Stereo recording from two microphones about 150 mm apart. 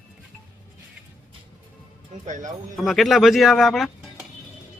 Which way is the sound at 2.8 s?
Centre (ahead or behind).